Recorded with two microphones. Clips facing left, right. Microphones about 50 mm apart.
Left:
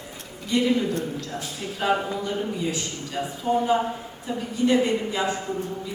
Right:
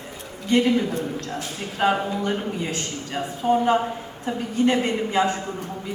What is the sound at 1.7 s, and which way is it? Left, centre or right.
A woman's voice, right.